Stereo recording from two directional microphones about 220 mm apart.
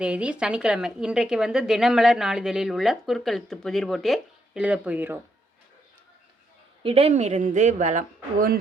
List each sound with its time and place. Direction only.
0.0 s a woman's voice: 5° right (ahead or behind)
6.8 s speech: 25° right (ahead or behind)